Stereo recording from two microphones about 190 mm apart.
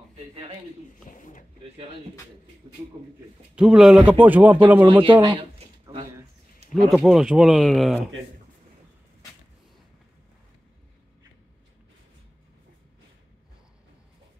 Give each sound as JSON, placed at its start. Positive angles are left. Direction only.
{"t": 1.0, "sound": "speech", "side_deg": 45}
{"t": 3.5, "sound": "speech", "side_deg": -5}
{"t": 5.0, "sound": "speech", "side_deg": -25}
{"t": 6.7, "sound": "speech", "side_deg": 0}